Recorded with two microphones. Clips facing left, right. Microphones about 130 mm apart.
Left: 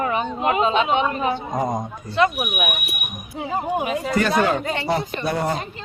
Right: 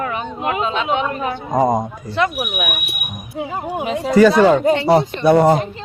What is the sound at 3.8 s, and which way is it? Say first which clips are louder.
Speech: right 3 dB; 5° left (ahead or behind).